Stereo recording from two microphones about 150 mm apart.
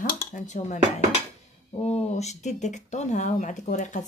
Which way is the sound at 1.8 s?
45° left (ahead or behind).